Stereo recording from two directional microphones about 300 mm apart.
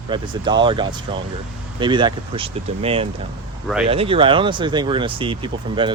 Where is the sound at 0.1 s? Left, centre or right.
Centre.